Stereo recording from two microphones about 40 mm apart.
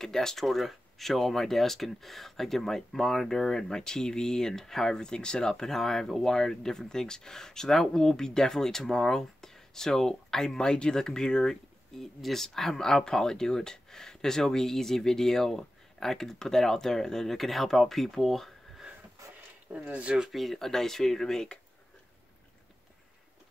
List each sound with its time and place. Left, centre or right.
0.0 s speech: centre
0.5 s speech: centre
4.9 s speech: centre
19.7 s speech: right
20.2 s speech: centre